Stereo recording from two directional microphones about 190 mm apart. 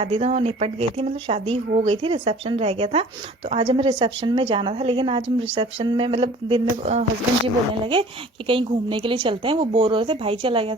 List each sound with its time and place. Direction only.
0.0 s a woman's voice: 30° right (ahead or behind)